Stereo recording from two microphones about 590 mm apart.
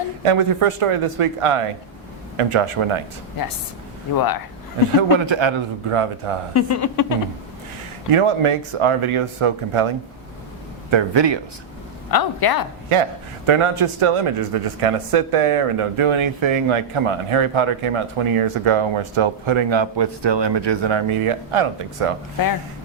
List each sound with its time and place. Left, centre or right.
0.2 s speech: right
4.1 s a woman's voice: left
4.9 s speech: right
6.5 s speech: left
8.1 s speech: right
10.9 s speech: right
12.1 s a woman's voice: left
12.9 s speech: right